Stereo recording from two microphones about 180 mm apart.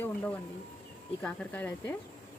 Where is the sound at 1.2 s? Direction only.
10° left (ahead or behind).